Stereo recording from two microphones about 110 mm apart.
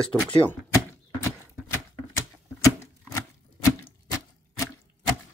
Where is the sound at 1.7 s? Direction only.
25° left (ahead or behind).